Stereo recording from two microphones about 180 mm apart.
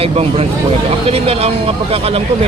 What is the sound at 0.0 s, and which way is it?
Speech, 30° right (ahead or behind).